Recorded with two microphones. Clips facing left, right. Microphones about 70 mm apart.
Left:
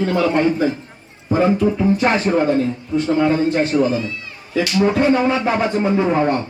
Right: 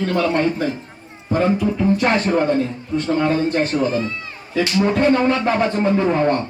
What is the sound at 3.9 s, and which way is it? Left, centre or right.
Speech, right.